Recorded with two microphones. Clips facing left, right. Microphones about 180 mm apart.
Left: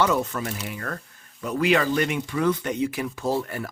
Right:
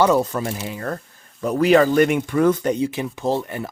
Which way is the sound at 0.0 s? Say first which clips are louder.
Right 6 dB; 35° right (ahead or behind).